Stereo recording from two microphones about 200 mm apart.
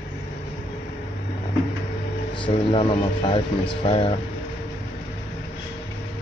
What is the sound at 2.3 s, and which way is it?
Speech, 25° left (ahead or behind).